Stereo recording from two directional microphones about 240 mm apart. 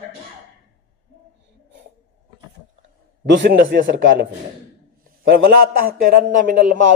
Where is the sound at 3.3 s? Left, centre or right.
Right.